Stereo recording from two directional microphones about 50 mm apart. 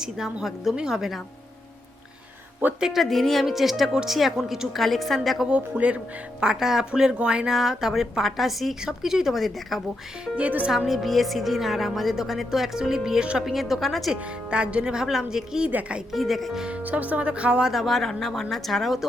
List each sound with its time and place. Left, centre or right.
0.0 s a woman's voice: centre
2.8 s speech: centre
5.5 s speech: right
6.4 s a woman's voice: centre
10.3 s speech: right
10.7 s a woman's voice: centre
14.1 s a woman's voice: right
16.1 s speech: centre
16.6 s speech: right
16.8 s speech: right
17.7 s speech: centre